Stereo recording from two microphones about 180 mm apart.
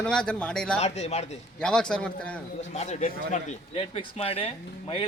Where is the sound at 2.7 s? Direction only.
40° left (ahead or behind).